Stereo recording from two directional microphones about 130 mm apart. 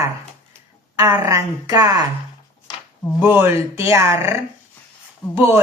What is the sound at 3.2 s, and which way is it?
Speech, 20° right (ahead or behind).